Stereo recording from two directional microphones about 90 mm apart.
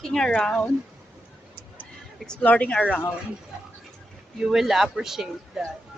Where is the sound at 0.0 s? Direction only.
5° left (ahead or behind).